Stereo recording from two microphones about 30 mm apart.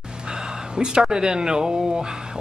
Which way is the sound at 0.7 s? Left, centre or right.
Right.